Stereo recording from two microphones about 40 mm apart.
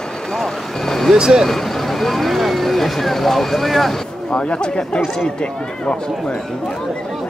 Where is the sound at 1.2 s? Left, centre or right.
Centre.